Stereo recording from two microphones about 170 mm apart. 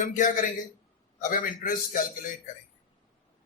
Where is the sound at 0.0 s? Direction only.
50° left (ahead or behind).